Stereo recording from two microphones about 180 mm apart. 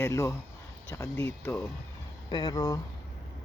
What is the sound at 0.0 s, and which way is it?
Speech, 15° left (ahead or behind).